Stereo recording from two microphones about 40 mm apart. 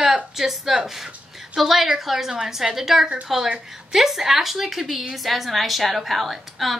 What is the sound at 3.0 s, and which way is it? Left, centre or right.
Speech, right.